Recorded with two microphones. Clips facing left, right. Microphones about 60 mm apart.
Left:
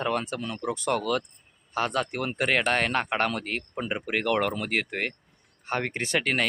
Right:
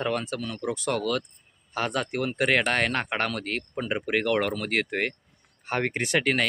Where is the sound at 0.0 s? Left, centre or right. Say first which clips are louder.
Even; centre.